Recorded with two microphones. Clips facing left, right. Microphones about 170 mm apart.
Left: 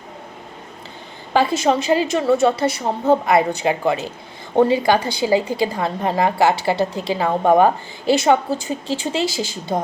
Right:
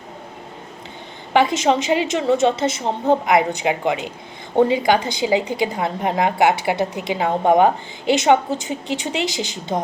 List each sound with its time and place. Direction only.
1.3 s a woman's voice: 20° right (ahead or behind)